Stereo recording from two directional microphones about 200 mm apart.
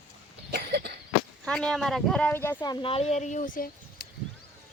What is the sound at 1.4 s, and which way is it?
Speech, 5° left (ahead or behind).